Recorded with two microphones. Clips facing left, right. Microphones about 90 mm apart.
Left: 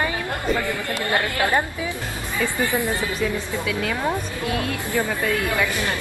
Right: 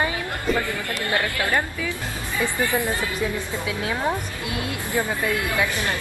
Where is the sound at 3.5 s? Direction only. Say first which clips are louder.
Left 2 dB; 20° right (ahead or behind).